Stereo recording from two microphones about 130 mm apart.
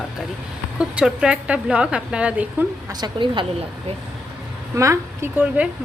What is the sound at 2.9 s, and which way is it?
Speech, 35° right (ahead or behind).